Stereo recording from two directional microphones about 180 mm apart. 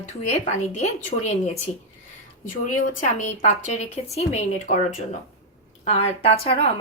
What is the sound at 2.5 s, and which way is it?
Speech, 45° left (ahead or behind).